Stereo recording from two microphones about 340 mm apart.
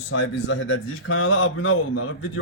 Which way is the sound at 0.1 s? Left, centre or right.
Left.